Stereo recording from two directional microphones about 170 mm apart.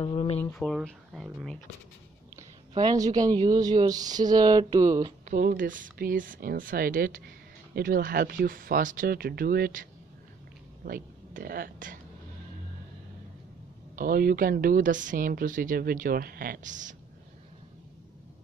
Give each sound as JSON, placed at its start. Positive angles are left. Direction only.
{"t": 0.0, "sound": "a sound", "side_deg": 35}
{"t": 0.6, "sound": "speech", "side_deg": 0}
{"t": 2.8, "sound": "speech", "side_deg": -25}
{"t": 5.3, "sound": "speech", "side_deg": -55}
{"t": 10.9, "sound": "speech", "side_deg": -60}
{"t": 13.9, "sound": "speech", "side_deg": -55}